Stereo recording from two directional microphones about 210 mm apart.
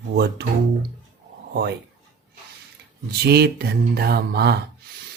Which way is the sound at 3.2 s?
50° right (ahead or behind).